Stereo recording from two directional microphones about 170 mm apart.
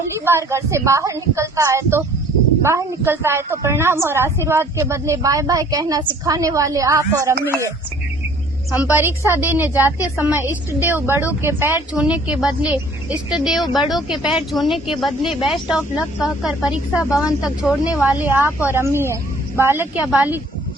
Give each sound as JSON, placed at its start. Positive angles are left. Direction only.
{"t": 0.3, "sound": "a woman's voice", "side_deg": -15}
{"t": 8.7, "sound": "a woman's voice", "side_deg": -10}